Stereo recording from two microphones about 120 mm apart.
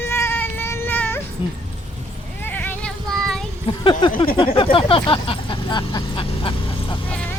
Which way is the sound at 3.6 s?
45° left (ahead or behind).